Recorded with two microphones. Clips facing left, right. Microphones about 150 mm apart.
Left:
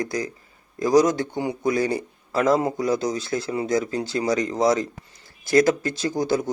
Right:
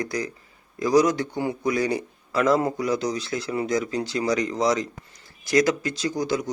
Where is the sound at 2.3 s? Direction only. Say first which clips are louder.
Left 1 dB; 40° left (ahead or behind).